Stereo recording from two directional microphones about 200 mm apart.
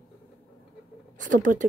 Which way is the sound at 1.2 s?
40° right (ahead or behind).